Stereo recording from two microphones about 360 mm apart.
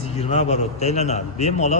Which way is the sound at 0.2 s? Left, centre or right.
Centre.